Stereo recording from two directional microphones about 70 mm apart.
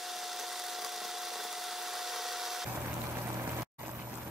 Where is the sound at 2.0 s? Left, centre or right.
Centre.